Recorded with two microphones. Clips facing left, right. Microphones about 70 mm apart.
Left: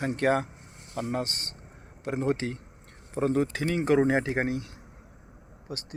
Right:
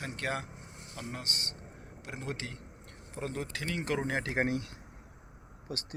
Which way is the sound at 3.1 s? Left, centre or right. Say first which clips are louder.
Left 11 dB; left.